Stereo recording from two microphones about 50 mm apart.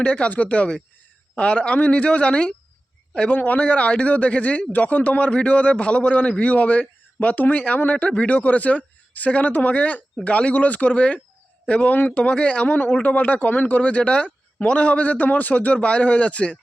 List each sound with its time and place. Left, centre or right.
0.0 s a man's voice: left
3.3 s a man's voice: left